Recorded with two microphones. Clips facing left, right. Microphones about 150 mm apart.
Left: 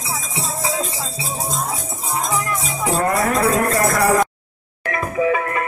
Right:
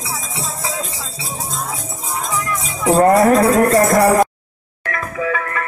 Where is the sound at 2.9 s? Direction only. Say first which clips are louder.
Right 9 dB; 45° right (ahead or behind).